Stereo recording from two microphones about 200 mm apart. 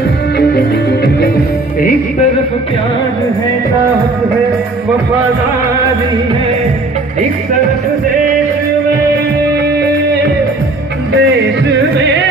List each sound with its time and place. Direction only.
0.4 s music: 50° left (ahead or behind)
11.1 s music: 60° right (ahead or behind)